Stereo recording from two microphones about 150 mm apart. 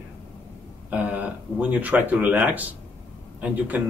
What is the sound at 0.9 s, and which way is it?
Speech, 10° right (ahead or behind).